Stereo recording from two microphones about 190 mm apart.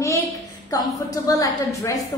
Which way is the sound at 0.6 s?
20° left (ahead or behind).